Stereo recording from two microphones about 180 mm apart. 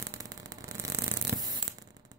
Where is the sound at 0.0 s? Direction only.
20° right (ahead or behind).